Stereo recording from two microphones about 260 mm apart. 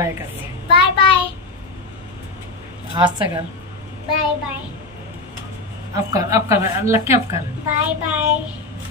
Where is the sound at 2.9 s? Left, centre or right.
Centre.